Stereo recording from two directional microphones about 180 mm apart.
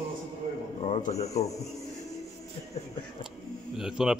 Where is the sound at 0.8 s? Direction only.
35° left (ahead or behind).